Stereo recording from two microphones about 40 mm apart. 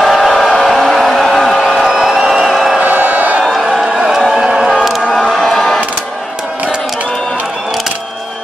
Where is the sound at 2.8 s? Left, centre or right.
Right.